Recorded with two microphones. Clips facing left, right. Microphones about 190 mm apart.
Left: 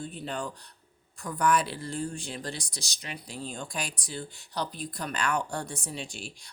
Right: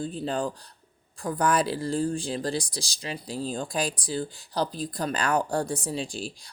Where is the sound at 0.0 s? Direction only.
35° right (ahead or behind).